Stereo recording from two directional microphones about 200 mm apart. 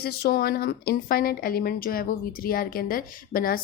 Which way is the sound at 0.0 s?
50° left (ahead or behind).